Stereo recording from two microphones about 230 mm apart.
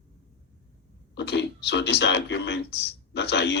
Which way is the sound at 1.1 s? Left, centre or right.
Left.